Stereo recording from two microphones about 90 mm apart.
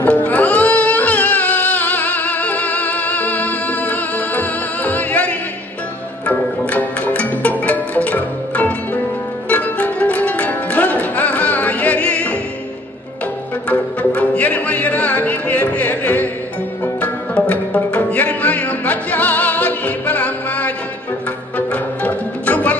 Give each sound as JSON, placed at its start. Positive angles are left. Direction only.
{"t": 0.0, "sound": "music", "side_deg": 20}
{"t": 13.7, "sound": "music", "side_deg": 15}